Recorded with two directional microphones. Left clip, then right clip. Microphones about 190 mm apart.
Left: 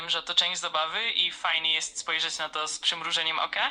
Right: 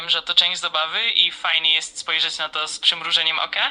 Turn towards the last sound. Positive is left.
turn(degrees=-15)  # may be behind; listen again after turning